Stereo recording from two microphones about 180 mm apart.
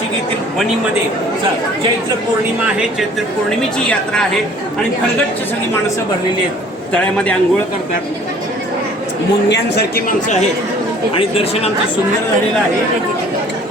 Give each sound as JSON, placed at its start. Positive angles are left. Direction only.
{"t": 3.8, "sound": "a woman's voice", "side_deg": 5}
{"t": 6.9, "sound": "a man's voice", "side_deg": 5}
{"t": 9.5, "sound": "speech", "side_deg": 70}
{"t": 11.2, "sound": "speech", "side_deg": 30}